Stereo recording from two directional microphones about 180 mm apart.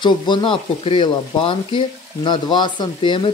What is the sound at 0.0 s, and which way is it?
Speech, 25° left (ahead or behind).